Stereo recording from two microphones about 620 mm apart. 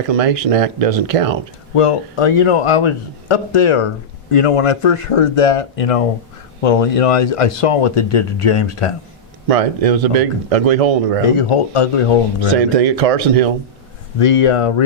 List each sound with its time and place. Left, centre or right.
0.1 s speech: right
1.7 s a man's voice: left
9.5 s speech: right
11.3 s a man's voice: left
12.5 s speech: right
14.2 s a man's voice: left